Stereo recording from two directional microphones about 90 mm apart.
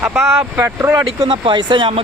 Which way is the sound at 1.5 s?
60° right (ahead or behind).